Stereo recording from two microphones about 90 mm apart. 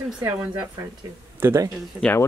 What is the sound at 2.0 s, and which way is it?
Speech, 10° left (ahead or behind).